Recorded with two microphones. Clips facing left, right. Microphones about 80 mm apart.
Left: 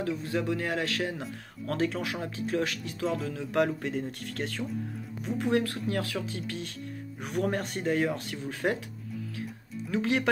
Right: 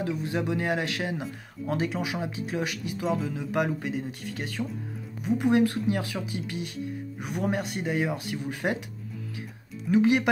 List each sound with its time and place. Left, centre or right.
0.0 s a man's voice: centre
9.8 s speech: centre